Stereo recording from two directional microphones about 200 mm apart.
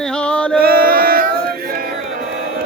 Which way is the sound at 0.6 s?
50° right (ahead or behind).